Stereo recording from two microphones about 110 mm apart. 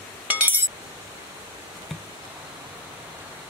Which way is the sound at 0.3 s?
15° right (ahead or behind).